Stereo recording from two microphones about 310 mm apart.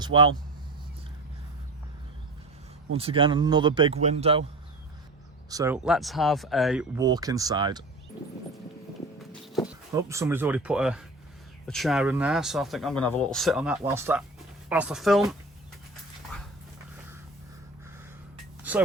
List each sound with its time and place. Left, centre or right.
0.0 s speech: centre
2.9 s speech: centre
5.5 s speech: centre
9.6 s speech: centre
18.7 s a sound: centre